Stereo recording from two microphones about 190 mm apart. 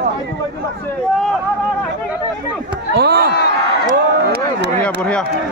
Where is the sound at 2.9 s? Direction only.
55° right (ahead or behind).